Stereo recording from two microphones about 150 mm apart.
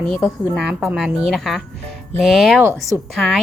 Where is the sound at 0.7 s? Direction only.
5° right (ahead or behind).